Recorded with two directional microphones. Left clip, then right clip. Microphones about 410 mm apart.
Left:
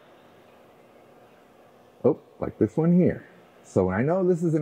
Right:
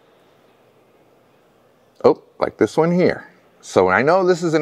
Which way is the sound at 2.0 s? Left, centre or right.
Centre.